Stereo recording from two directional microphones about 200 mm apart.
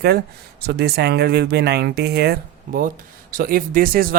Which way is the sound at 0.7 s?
55° right (ahead or behind).